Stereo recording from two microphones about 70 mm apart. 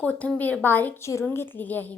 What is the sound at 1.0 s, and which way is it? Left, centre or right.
Speech, left.